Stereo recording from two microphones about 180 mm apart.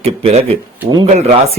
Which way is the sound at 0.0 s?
35° right (ahead or behind).